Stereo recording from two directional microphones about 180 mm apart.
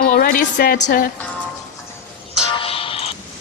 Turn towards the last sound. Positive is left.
turn(degrees=30)  # may be behind; listen again after turning